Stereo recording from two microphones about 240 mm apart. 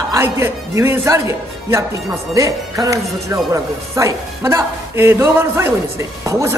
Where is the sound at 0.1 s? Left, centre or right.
Centre.